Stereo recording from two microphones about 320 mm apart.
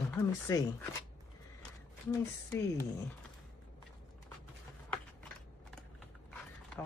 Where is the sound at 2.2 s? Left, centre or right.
Centre.